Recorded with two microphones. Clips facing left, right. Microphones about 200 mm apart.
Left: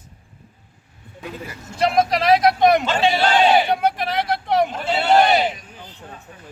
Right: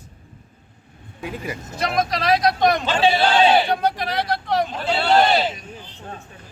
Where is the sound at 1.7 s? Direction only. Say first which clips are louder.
Left 5 dB; 30° left (ahead or behind).